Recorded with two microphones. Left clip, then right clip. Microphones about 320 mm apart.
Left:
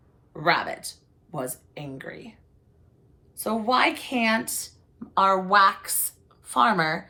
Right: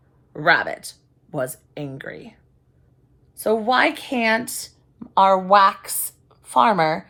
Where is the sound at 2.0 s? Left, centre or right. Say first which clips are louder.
Right 4 dB; right.